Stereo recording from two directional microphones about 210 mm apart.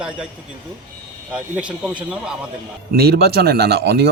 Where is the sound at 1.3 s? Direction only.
5° right (ahead or behind).